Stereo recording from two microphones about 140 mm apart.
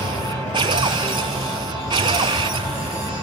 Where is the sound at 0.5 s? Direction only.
35° right (ahead or behind).